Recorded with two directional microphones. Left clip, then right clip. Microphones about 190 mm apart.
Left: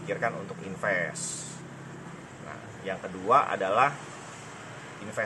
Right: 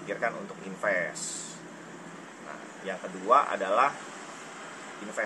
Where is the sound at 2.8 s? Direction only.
15° left (ahead or behind).